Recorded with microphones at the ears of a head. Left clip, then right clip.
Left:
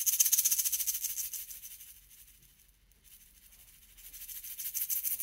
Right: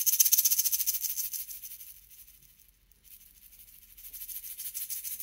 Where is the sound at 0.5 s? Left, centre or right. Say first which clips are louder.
Right 3 dB; centre.